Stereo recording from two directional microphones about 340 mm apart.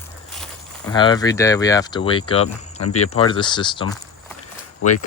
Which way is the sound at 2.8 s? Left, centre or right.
Left.